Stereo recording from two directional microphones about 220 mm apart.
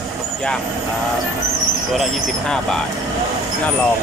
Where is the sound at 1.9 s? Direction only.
Centre (ahead or behind).